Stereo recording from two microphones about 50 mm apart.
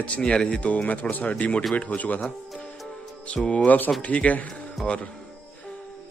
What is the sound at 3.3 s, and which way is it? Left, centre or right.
Speech, left.